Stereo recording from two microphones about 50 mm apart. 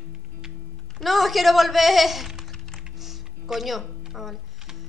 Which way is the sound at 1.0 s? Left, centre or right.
Centre.